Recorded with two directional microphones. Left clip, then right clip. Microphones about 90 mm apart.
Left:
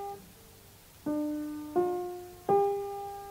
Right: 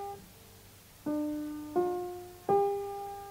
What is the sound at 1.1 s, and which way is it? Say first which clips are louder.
Music: left 1 dB; 15° left (ahead or behind).